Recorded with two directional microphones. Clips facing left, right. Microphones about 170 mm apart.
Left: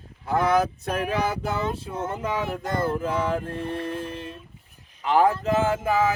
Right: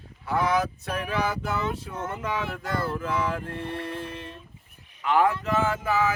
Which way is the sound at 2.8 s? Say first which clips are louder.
Left 3 dB; 40° left (ahead or behind).